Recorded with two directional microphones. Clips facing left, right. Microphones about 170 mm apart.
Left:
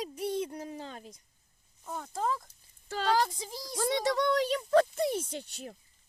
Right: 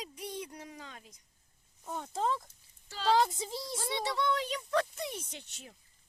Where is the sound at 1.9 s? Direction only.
20° right (ahead or behind).